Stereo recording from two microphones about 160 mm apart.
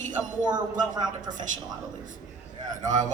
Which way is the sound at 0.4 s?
25° right (ahead or behind).